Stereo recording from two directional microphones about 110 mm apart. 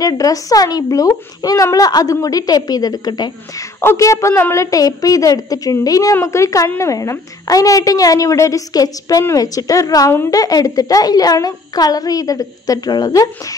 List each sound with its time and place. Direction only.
0.0 s a child's voice: 35° left (ahead or behind)
3.8 s a child's voice: 25° left (ahead or behind)